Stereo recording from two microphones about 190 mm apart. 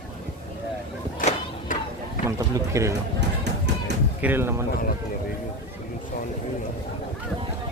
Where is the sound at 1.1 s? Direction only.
45° left (ahead or behind).